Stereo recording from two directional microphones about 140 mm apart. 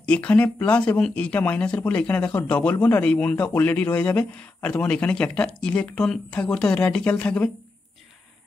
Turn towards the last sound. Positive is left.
turn(degrees=10)  # may be behind; listen again after turning